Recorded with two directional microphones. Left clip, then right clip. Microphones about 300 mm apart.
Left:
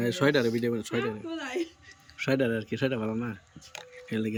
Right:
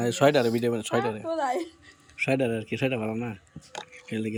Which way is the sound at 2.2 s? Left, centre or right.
Centre.